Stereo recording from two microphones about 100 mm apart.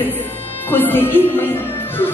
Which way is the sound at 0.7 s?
20° left (ahead or behind).